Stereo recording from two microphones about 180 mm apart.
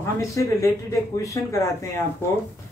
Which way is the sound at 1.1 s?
15° left (ahead or behind).